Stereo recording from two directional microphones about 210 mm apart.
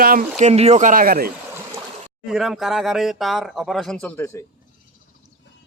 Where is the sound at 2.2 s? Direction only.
Centre (ahead or behind).